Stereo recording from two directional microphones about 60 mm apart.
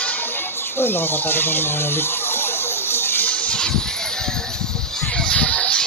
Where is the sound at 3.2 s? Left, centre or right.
Left.